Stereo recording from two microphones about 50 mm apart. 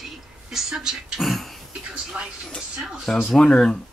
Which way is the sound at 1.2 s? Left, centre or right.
Centre.